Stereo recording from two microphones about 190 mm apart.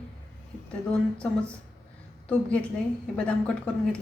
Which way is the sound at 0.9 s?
5° left (ahead or behind).